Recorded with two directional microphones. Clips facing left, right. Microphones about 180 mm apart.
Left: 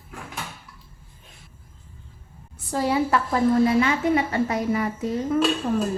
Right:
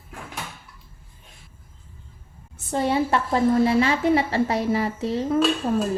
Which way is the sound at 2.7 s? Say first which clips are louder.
Even; 25° right (ahead or behind).